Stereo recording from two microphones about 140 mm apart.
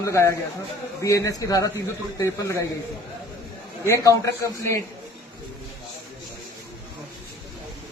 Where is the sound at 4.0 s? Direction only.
20° left (ahead or behind).